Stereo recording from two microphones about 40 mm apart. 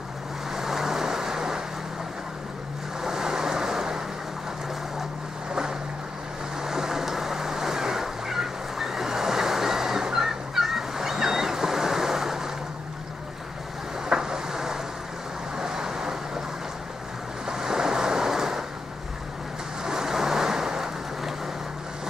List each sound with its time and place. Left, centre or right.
0.5 s waves: centre
3.0 s waves: centre
5.5 s vehicle: centre
14.0 s vehicle: centre
17.5 s waves: centre
19.8 s vehicle: centre